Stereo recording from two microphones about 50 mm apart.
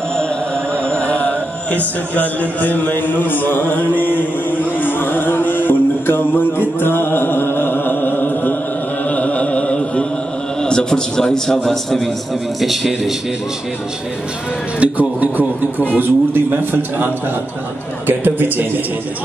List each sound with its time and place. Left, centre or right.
0.8 s mantra: left
2.1 s a sound: left
4.0 s music: left
9.1 s a sound: left
10.6 s a man's voice: centre
14.8 s speech: right
16.0 s a man's voice: right